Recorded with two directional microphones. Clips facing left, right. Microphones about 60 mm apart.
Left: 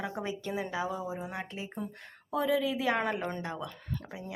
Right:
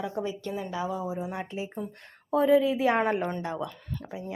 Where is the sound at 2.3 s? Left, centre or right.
Right.